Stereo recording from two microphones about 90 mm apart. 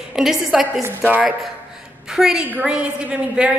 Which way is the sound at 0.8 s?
20° right (ahead or behind).